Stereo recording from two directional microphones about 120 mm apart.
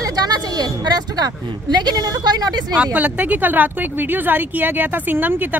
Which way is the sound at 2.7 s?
15° right (ahead or behind).